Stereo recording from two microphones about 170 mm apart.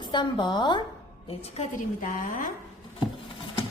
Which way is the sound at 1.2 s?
40° left (ahead or behind).